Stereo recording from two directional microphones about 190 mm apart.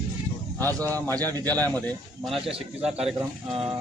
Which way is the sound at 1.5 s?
10° left (ahead or behind).